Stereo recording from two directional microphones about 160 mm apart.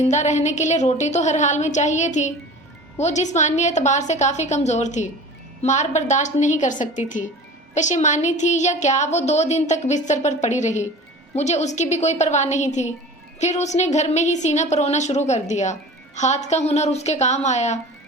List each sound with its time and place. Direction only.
0.0 s a woman's voice: 45° left (ahead or behind)